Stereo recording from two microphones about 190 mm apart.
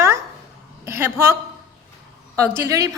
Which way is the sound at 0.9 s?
10° right (ahead or behind).